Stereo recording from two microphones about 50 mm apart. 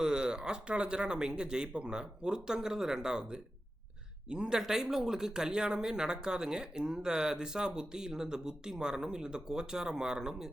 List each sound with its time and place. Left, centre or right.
0.0 s speech: centre